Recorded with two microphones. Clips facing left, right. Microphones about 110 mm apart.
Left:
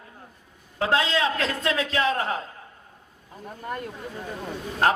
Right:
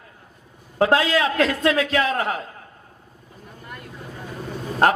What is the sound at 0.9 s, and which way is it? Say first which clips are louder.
A man's voice: right 1 dB; 25° left (ahead or behind).